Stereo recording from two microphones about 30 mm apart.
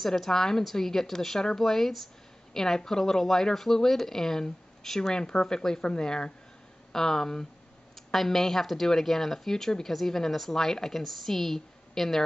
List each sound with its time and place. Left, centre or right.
0.0 s speech: centre; by 6.3 s left
6.9 s speech: centre